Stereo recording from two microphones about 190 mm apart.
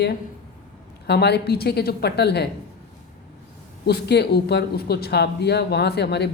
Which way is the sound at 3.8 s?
60° left (ahead or behind).